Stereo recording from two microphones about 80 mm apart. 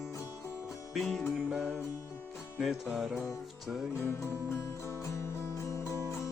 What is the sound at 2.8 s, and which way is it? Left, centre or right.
Music, centre.